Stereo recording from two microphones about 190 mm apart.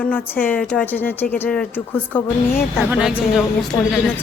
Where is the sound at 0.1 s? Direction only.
10° left (ahead or behind).